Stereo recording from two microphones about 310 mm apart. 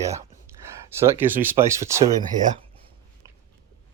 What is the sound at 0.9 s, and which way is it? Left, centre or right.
Speech, centre.